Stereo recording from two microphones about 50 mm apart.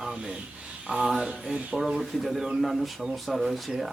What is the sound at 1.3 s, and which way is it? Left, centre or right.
Mantra, right.